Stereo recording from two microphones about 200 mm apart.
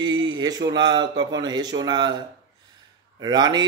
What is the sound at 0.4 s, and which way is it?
Speech, 20° right (ahead or behind).